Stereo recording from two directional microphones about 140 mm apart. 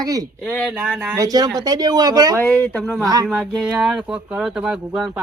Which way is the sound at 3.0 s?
25° right (ahead or behind).